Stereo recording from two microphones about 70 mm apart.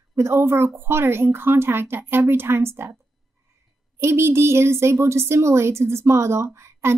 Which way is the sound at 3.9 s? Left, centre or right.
Right.